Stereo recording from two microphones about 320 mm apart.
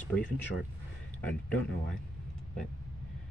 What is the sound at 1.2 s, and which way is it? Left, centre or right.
Speech, centre.